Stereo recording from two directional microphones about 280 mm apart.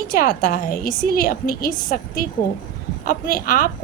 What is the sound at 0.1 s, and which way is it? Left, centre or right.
A woman's voice, left.